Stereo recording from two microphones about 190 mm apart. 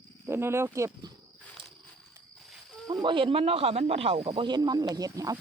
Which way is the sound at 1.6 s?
25° right (ahead or behind).